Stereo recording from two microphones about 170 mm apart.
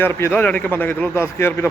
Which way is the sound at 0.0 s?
15° left (ahead or behind).